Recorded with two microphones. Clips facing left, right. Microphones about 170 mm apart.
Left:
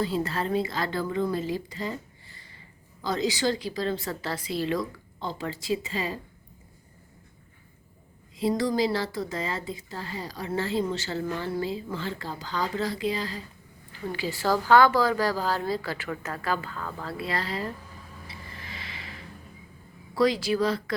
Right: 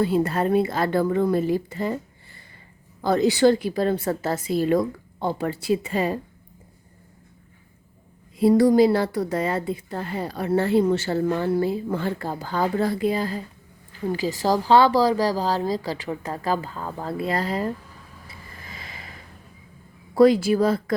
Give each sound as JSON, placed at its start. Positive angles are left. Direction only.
{"t": 0.0, "sound": "a woman's voice", "side_deg": -55}
{"t": 3.0, "sound": "a woman's voice", "side_deg": -55}
{"t": 8.4, "sound": "a woman's voice", "side_deg": -55}
{"t": 14.1, "sound": "a woman's voice", "side_deg": -40}
{"t": 18.5, "sound": "a sound", "side_deg": -45}
{"t": 20.1, "sound": "a woman's voice", "side_deg": -50}